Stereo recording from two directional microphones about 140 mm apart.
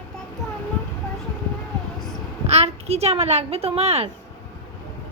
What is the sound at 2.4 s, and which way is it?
A child's voice, 50° right (ahead or behind).